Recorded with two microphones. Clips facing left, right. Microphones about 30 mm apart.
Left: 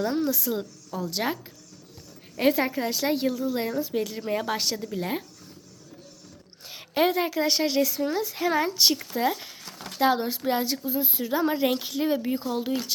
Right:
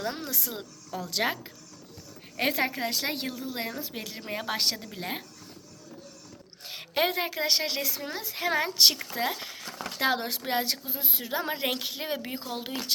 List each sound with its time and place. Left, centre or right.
0.1 s speech: right
0.9 s a woman's voice: right
2.4 s speech: right
2.6 s speech: right
3.2 s a woman's voice: centre
4.5 s a woman's voice: right
6.7 s a woman's voice: right
8.7 s speech: right
9.1 s speech: right
9.4 s a sound: right
10.0 s a woman's voice: right
10.4 s speech: right
11.3 s speech: right